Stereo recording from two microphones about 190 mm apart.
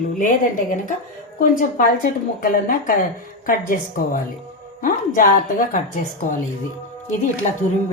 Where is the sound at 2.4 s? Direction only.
45° left (ahead or behind).